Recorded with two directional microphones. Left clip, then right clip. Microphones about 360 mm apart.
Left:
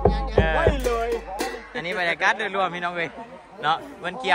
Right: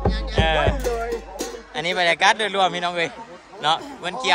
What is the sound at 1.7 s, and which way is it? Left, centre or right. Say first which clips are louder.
A man's voice: right 6 dB; centre.